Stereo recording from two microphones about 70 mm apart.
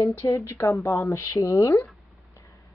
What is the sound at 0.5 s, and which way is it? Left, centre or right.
Speech, left.